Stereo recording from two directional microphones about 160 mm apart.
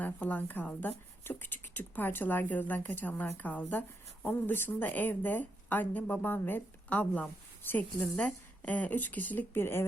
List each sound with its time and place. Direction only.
0.0 s a woman's voice: 10° left (ahead or behind)